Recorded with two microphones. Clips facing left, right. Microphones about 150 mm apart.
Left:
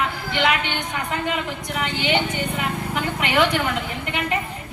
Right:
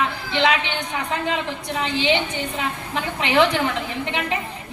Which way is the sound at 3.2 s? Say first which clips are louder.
Right 2 dB; 25° right (ahead or behind).